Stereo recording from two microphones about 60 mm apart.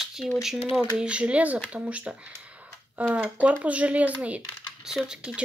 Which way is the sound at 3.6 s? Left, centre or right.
Right.